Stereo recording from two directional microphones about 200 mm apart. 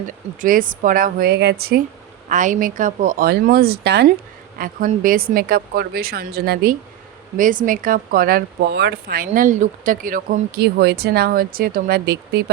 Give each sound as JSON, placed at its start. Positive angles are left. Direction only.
{"t": 0.4, "sound": "speech", "side_deg": -45}
{"t": 2.3, "sound": "speech", "side_deg": -40}